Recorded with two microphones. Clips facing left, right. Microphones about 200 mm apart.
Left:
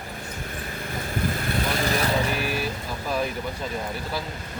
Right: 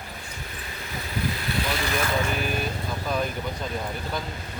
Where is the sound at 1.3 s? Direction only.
50° left (ahead or behind).